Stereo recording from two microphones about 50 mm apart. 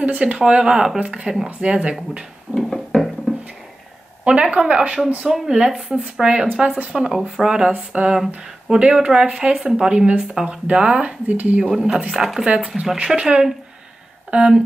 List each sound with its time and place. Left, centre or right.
0.0 s speech: right
0.9 s speech: right
2.5 s a sound: centre
4.3 s speech: right
5.2 s speech: centre
7.7 s speech: right
11.7 s speech: centre
12.5 s speech: centre